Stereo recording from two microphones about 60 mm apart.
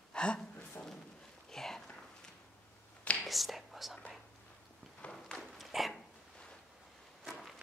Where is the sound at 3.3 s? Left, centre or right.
Centre.